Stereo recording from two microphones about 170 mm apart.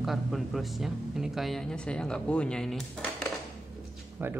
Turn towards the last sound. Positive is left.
turn(degrees=-10)  # may be behind; listen again after turning